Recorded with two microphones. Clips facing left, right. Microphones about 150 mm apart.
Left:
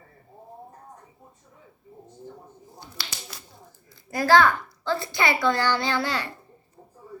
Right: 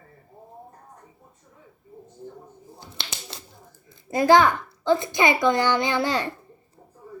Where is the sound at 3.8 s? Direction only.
20° right (ahead or behind).